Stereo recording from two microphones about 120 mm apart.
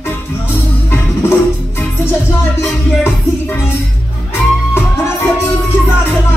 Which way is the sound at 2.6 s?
20° left (ahead or behind).